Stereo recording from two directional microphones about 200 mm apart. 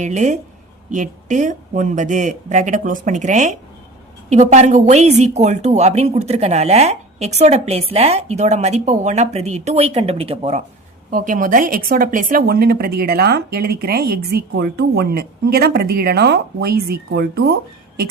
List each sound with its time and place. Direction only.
0.0 s a woman's voice: 35° right (ahead or behind)
11.1 s a woman's voice: 45° right (ahead or behind)